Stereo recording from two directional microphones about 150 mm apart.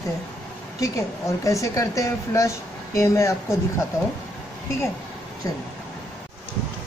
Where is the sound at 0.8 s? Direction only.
20° left (ahead or behind).